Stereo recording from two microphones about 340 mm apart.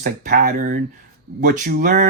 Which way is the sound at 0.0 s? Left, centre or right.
Right.